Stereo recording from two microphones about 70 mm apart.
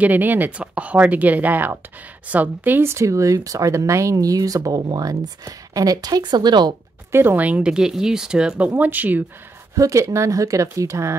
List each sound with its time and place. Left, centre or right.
0.0 s speech: right
2.9 s speech: right
7.1 s speech: right
7.3 s speech: right
7.7 s speech: centre; by 9.2 s right
9.8 s speech: right